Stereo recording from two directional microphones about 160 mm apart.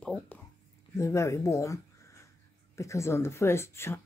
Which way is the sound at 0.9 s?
20° left (ahead or behind).